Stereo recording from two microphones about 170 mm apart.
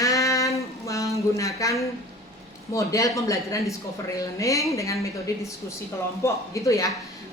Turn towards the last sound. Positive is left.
turn(degrees=20)  # may be behind; listen again after turning